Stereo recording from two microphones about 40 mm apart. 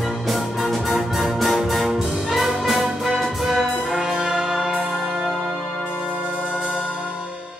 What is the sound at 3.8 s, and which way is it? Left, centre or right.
Brass instrument, centre.